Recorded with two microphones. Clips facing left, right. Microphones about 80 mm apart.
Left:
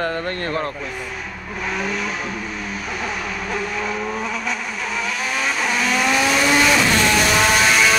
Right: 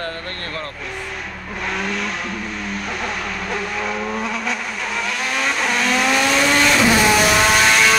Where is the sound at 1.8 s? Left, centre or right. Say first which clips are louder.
Even; centre.